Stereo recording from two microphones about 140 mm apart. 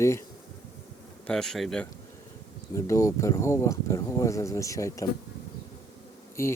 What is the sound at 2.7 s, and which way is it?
Speech, 20° left (ahead or behind).